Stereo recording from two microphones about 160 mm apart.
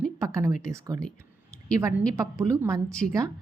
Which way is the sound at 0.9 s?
55° left (ahead or behind).